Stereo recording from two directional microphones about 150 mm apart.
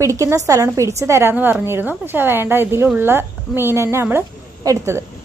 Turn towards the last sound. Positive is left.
turn(degrees=-20)  # may be behind; listen again after turning